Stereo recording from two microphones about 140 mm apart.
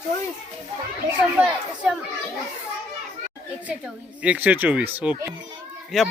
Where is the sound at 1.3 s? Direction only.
5° right (ahead or behind).